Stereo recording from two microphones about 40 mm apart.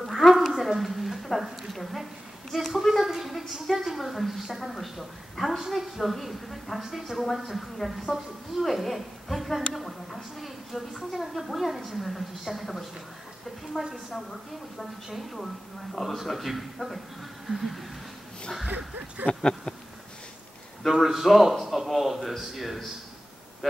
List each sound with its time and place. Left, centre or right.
0.0 s a sound: centre
1.4 s a man's voice: centre
15.1 s a man's voice: centre
19.3 s a sound: left
20.9 s a man's voice: centre
23.6 s speech: centre